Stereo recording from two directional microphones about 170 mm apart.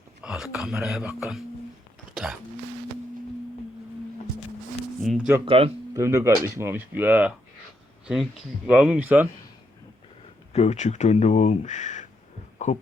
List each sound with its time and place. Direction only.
0.2 s speech: 5° right (ahead or behind)
4.9 s speech: centre (ahead or behind)
5.5 s speech: 35° right (ahead or behind)
5.9 s speech: 15° right (ahead or behind)
10.5 s speech: 40° left (ahead or behind)
12.6 s a sound: 45° left (ahead or behind)